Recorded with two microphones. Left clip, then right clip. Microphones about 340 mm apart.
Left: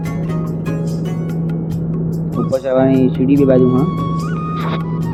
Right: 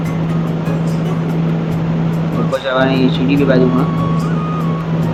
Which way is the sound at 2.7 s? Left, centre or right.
Centre.